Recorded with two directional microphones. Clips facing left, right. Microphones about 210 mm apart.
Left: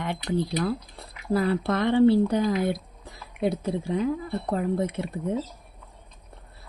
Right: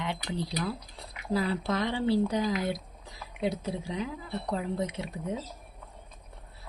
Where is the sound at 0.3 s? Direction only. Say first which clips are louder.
Left 10 dB; 55° left (ahead or behind).